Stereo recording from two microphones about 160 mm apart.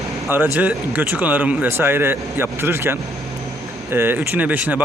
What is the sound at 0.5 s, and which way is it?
Speech, 10° right (ahead or behind).